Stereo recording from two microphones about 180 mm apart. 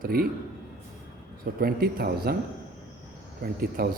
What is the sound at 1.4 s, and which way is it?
Speech, 55° right (ahead or behind).